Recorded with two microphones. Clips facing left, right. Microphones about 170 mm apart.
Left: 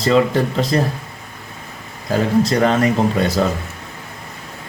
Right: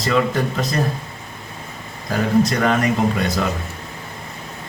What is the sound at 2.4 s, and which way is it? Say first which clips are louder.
Speech: left 3 dB; 30° left (ahead or behind).